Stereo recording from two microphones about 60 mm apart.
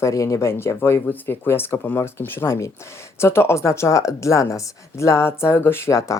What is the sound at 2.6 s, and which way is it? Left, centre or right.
Speech, left.